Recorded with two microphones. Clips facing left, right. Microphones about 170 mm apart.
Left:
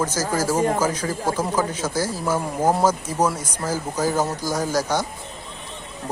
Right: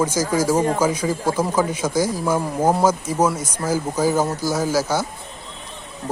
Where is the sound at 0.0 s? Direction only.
10° right (ahead or behind).